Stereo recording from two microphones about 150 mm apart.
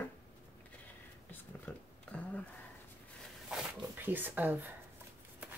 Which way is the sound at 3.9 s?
15° right (ahead or behind).